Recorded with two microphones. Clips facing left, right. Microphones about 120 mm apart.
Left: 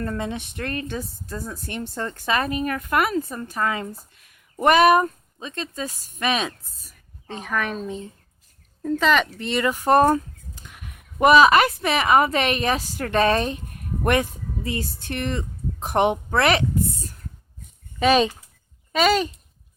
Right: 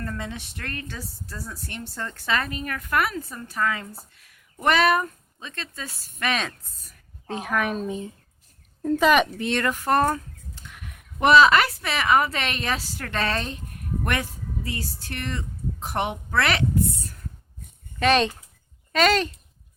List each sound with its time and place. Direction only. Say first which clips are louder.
0.0 s speech: left 5 dB; 25° left (ahead or behind)
7.3 s a woman's voice: right 1 dB; 5° right (ahead or behind)
9.4 s a woman's voice: left 2 dB; 5° left (ahead or behind)
18.0 s speech: left 2 dB; 10° left (ahead or behind)